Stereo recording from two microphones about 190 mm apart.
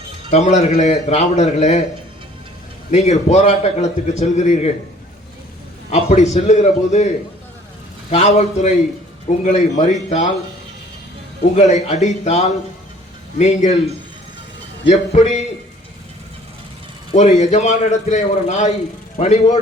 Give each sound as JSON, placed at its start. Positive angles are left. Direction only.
{"t": 0.3, "sound": "a man's voice", "side_deg": 40}
{"t": 2.9, "sound": "a man's voice", "side_deg": 35}
{"t": 5.9, "sound": "a man's voice", "side_deg": 35}
{"t": 8.1, "sound": "a man's voice", "side_deg": 35}
{"t": 11.5, "sound": "a man's voice", "side_deg": 35}
{"t": 17.1, "sound": "a man's voice", "side_deg": 35}